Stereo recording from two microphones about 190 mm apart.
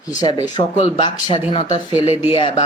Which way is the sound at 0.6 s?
30° left (ahead or behind).